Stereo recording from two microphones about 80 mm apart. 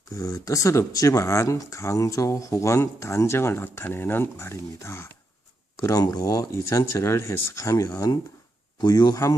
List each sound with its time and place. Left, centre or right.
0.1 s speech: left
5.8 s speech: left
6.5 s speech: left
8.8 s speech: left